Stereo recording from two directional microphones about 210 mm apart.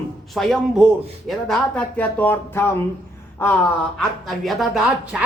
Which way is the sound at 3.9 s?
Centre (ahead or behind).